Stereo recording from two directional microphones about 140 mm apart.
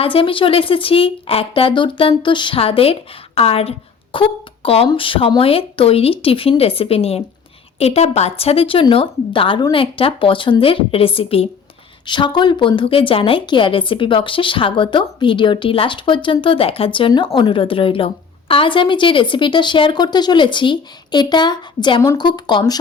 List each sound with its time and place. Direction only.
0.0 s a woman's voice: 40° left (ahead or behind)